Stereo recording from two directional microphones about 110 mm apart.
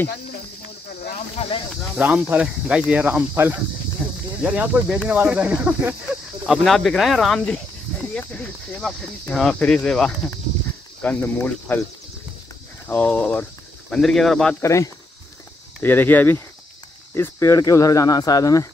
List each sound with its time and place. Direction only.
2.0 s speech: 15° right (ahead or behind)
4.0 s cricket: 10° right (ahead or behind)
4.5 s speech: 15° right (ahead or behind)
6.4 s speech: centre (ahead or behind)
11.0 s speech: 15° left (ahead or behind)
12.8 s speech: 15° left (ahead or behind)
14.6 s speech: 30° left (ahead or behind)
15.8 s speech: 15° left (ahead or behind)